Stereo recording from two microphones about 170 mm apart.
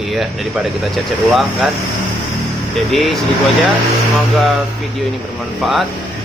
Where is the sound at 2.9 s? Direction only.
Centre (ahead or behind).